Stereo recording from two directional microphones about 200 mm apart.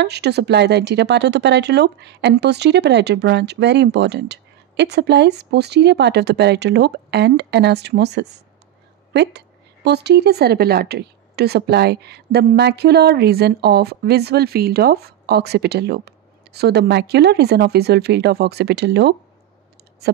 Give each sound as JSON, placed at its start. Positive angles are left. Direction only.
{"t": 0.0, "sound": "a woman's voice", "side_deg": -55}